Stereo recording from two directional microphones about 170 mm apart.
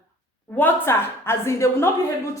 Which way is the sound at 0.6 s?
15° left (ahead or behind).